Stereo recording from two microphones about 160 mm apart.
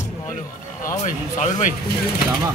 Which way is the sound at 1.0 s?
55° left (ahead or behind).